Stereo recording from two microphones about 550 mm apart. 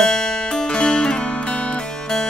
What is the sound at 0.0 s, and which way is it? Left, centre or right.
Music, centre.